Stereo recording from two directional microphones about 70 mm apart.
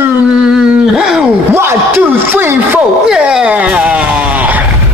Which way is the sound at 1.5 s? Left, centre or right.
Right.